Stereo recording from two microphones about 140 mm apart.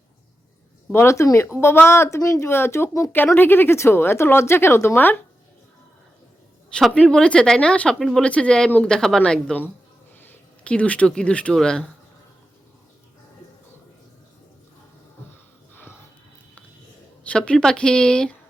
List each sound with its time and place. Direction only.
0.9 s speech: 20° left (ahead or behind)
6.7 s speech: 5° left (ahead or behind)
15.7 s music: 15° left (ahead or behind)
17.2 s speech: 5° left (ahead or behind)